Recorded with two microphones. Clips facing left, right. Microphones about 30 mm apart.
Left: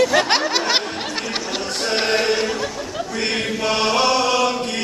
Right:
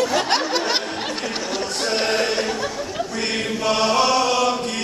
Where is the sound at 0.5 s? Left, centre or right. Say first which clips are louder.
Left 2 dB; left.